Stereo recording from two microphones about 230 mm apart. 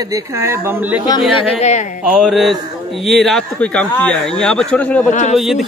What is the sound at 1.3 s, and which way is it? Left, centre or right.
Speech, left.